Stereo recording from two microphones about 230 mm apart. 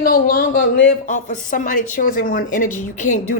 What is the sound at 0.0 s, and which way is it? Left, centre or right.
Speech, left.